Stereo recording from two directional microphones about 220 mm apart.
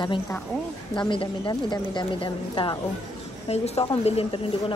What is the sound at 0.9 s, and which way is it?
Speech, 20° left (ahead or behind).